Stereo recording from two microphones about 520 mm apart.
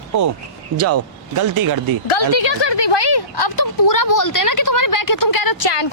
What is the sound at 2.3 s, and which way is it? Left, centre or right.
A woman's voice, left.